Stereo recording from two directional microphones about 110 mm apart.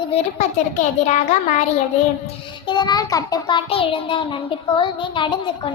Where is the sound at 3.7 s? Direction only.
55° left (ahead or behind).